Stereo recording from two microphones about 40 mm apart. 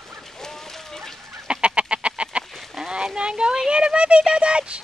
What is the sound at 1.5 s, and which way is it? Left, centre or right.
Chicken, right.